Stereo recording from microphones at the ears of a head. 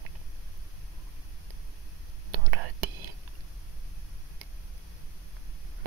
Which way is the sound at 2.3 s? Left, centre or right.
Right.